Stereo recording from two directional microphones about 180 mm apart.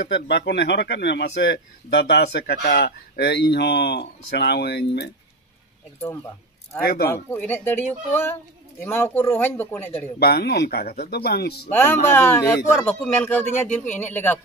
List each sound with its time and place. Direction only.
0.1 s speech: 65° left (ahead or behind)
6.8 s speech: 60° left (ahead or behind)
7.2 s a man's voice: 10° left (ahead or behind)
10.1 s speech: 60° left (ahead or behind)
11.7 s a man's voice: 10° left (ahead or behind)